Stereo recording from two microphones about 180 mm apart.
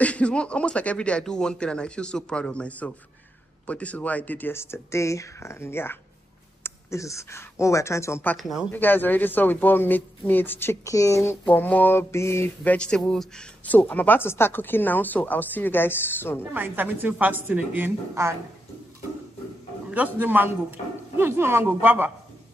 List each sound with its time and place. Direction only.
0.0 s a man's voice: 5° left (ahead or behind)
16.5 s a woman's voice: 10° right (ahead or behind)
20.2 s a woman's voice: 10° right (ahead or behind)